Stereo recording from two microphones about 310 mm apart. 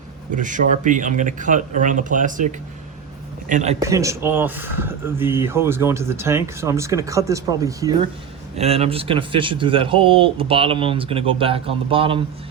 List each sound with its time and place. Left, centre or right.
0.3 s speech: right
3.5 s speech: right
3.8 s speech: centre